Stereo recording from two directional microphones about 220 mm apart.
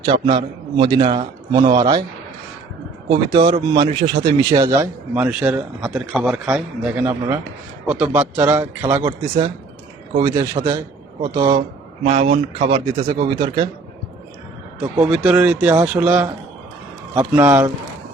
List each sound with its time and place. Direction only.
0.0 s a man's voice: 25° right (ahead or behind)
3.1 s a man's voice: 20° right (ahead or behind)
10.2 s a man's voice: 15° right (ahead or behind)
14.8 s a man's voice: 5° right (ahead or behind)